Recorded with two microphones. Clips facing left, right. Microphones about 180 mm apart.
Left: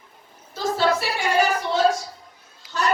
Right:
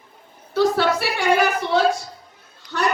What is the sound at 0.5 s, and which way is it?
Speech, 65° right (ahead or behind).